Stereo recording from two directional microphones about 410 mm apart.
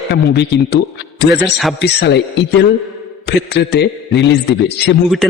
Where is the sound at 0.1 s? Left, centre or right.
Left.